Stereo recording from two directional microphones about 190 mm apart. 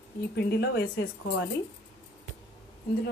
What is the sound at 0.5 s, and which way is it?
Speech, 60° left (ahead or behind).